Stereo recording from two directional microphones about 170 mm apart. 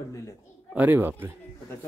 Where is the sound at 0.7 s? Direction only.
10° right (ahead or behind).